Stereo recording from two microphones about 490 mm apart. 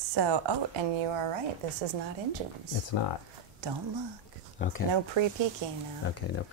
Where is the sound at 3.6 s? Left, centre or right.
Right.